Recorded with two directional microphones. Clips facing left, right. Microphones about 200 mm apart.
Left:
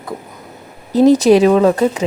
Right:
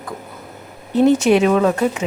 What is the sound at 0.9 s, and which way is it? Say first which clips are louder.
Speech: left 4 dB; 35° left (ahead or behind).